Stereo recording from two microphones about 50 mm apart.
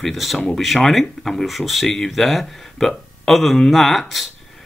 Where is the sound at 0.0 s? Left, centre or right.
Centre.